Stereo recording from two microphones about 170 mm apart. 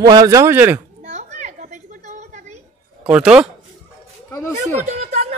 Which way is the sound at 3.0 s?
5° right (ahead or behind).